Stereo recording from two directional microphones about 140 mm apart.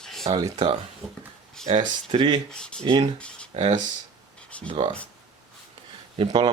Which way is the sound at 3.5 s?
45° right (ahead or behind).